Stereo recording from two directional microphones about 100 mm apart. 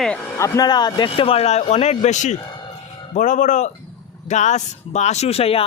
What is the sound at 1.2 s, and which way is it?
Speech, 80° left.